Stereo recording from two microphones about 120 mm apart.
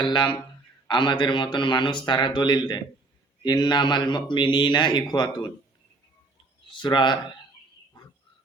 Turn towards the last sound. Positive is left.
turn(degrees=40)  # may be behind; listen again after turning